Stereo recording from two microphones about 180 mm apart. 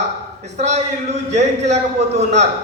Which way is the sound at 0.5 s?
40° right (ahead or behind).